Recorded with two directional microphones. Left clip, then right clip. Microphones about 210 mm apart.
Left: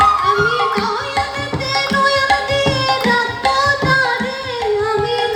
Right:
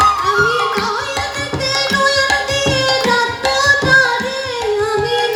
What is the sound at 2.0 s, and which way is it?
Tabla, 40° left (ahead or behind).